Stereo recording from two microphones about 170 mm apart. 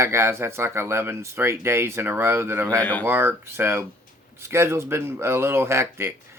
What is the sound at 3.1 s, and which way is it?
Speech, 15° right (ahead or behind).